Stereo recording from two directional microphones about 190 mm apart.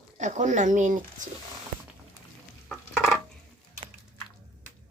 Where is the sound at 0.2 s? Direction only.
40° right (ahead or behind).